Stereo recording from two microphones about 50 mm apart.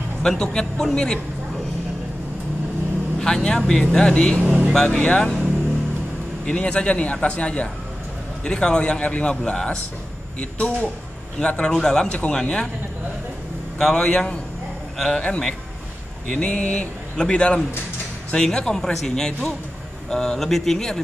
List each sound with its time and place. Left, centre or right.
0.2 s speech: centre
3.2 s speech: centre
4.5 s speech: right
4.8 s a man's voice: left
6.4 s a man's voice: centre
13.7 s a man's voice: centre